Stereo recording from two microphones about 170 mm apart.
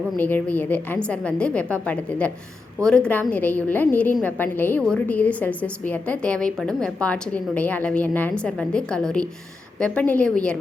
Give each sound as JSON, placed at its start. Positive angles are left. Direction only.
{"t": 0.2, "sound": "a woman's voice", "side_deg": 10}